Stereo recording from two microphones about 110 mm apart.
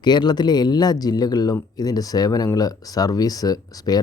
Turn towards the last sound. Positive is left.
turn(degrees=35)  # may be behind; listen again after turning